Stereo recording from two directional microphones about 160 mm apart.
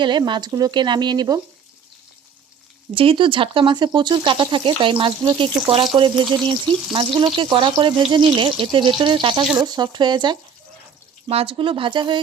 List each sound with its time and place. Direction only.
0.0 s speech: 30° right (ahead or behind)
2.9 s speech: 35° right (ahead or behind)